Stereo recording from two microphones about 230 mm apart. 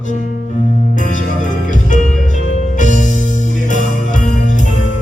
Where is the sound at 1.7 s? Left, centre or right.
Left.